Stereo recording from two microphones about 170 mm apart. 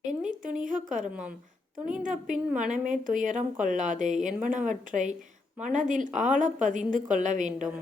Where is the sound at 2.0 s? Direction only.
50° right (ahead or behind).